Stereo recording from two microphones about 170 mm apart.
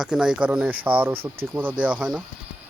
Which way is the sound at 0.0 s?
5° right (ahead or behind).